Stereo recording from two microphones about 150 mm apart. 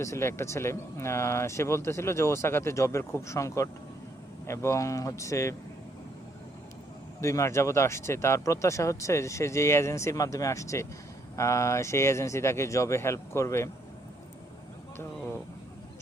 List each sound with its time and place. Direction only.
0.0 s speech: 20° left (ahead or behind)
7.2 s speech: 20° left (ahead or behind)